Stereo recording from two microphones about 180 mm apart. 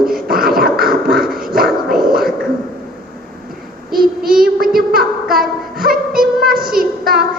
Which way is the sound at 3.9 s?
55° right (ahead or behind).